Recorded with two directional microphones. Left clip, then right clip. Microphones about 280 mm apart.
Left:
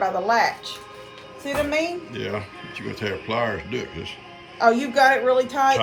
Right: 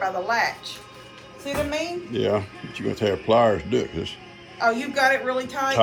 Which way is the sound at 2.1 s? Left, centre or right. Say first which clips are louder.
Right 6 dB; centre.